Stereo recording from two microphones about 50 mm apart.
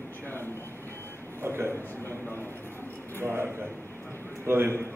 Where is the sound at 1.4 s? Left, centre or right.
Right.